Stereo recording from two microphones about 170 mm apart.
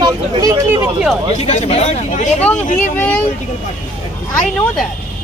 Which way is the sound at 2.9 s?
10° left (ahead or behind).